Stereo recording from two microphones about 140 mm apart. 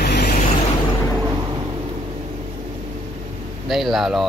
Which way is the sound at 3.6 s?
Centre (ahead or behind).